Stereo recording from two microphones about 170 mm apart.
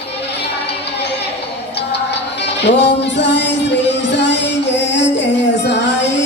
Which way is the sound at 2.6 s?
90° left.